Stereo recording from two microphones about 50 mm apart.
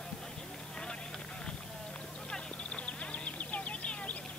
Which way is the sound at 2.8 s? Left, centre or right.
Left.